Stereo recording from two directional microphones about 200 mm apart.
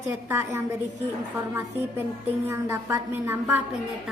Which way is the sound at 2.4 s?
15° right (ahead or behind).